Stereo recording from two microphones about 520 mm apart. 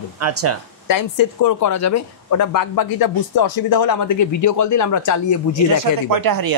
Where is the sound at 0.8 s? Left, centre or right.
Left.